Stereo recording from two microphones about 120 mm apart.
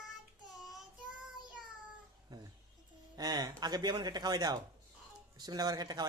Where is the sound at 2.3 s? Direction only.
35° right (ahead or behind).